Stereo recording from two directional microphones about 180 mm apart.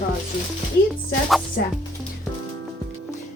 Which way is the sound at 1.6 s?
65° left (ahead or behind).